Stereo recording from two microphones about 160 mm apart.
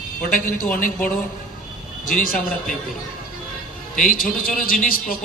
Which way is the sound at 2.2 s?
60° left (ahead or behind).